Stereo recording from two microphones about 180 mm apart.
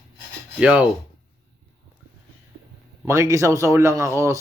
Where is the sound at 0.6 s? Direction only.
5° right (ahead or behind).